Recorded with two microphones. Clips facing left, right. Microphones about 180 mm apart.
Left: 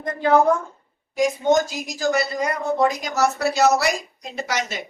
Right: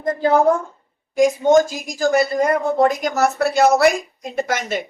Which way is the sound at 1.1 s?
50° right (ahead or behind).